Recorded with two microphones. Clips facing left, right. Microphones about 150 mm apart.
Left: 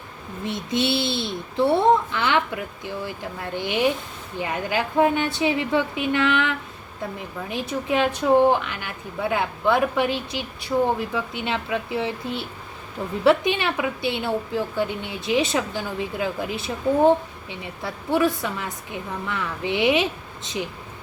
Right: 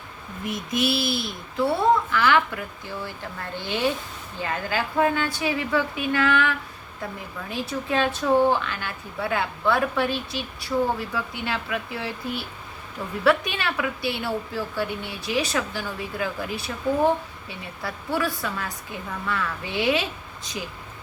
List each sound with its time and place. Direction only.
0.4 s a woman's voice: 25° left (ahead or behind)